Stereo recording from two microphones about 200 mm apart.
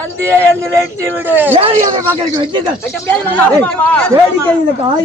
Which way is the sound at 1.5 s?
25° right (ahead or behind).